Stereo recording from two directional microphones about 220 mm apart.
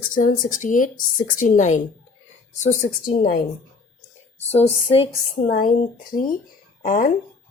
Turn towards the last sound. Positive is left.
turn(degrees=40)  # may be behind; listen again after turning